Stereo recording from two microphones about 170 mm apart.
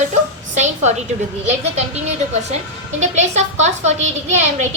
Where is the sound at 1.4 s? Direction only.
40° right (ahead or behind).